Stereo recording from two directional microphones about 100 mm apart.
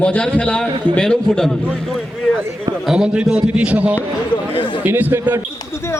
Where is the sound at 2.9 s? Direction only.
10° right (ahead or behind).